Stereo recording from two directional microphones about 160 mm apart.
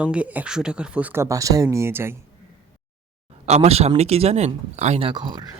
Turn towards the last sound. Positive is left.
turn(degrees=-25)  # may be behind; listen again after turning